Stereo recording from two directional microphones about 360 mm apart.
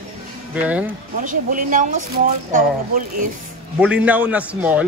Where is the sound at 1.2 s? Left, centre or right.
Right.